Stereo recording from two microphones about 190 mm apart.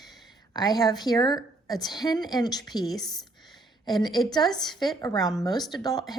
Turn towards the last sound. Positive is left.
turn(degrees=20)  # may be behind; listen again after turning